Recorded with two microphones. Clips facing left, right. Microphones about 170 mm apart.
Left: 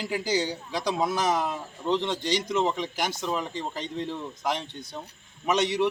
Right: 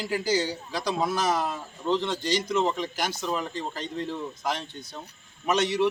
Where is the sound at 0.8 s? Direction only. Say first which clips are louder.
Even; 5° right (ahead or behind).